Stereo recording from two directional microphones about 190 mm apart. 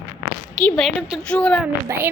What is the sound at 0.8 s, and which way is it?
Speech, centre (ahead or behind).